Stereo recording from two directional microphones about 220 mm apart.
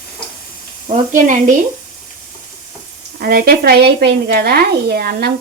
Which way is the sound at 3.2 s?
40° right (ahead or behind).